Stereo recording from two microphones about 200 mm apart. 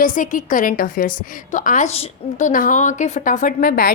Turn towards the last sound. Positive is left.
turn(degrees=45)  # may be behind; listen again after turning